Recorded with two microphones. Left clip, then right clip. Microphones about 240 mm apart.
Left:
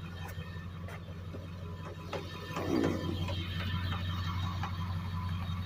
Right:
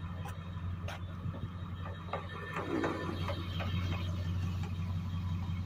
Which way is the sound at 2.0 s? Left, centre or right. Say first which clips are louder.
Right 1 dB; left.